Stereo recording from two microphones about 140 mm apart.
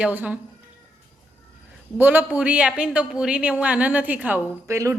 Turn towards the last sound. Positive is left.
turn(degrees=-20)  # may be behind; listen again after turning